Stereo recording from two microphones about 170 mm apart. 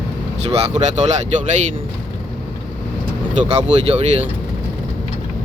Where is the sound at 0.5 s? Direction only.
40° right (ahead or behind).